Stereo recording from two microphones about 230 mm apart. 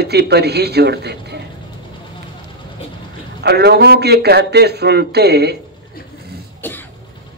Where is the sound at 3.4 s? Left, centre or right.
Right.